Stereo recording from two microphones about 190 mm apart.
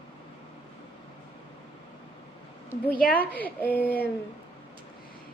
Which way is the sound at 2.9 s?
50° left (ahead or behind).